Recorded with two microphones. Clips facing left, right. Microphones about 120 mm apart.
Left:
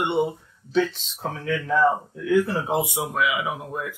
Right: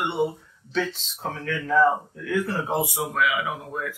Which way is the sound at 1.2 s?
5° left (ahead or behind).